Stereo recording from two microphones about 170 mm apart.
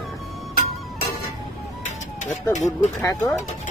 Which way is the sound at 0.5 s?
65° left (ahead or behind).